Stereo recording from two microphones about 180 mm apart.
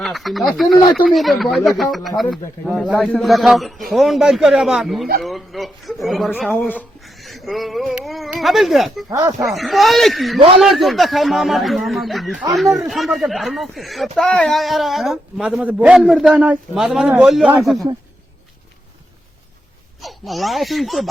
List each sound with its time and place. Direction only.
0.0 s speech: centre (ahead or behind)
9.0 s speech: 20° right (ahead or behind)
9.4 s speech: centre (ahead or behind)
20.0 s speech: centre (ahead or behind)